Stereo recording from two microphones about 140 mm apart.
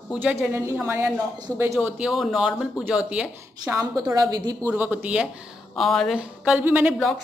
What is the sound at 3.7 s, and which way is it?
Speech, 20° right (ahead or behind).